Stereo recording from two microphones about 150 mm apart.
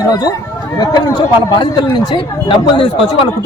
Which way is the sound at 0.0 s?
25° left (ahead or behind).